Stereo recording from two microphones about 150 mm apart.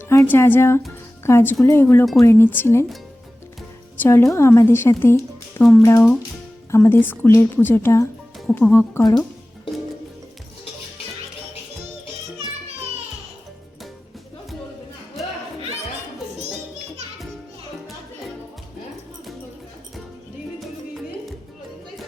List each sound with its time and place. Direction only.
0.1 s speech: 15° left (ahead or behind)
4.0 s speech: 15° left (ahead or behind)
16.5 s music: centre (ahead or behind)